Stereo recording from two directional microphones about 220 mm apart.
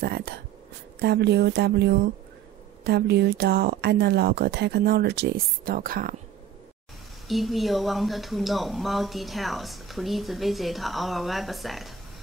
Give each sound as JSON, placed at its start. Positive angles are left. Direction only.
{"t": 0.0, "sound": "speech", "side_deg": -45}
{"t": 7.2, "sound": "speech", "side_deg": 0}